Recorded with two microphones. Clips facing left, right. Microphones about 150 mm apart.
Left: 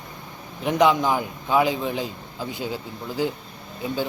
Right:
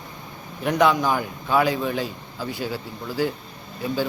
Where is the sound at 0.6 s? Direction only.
20° left (ahead or behind).